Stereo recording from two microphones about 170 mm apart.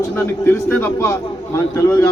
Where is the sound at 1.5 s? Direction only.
15° left (ahead or behind).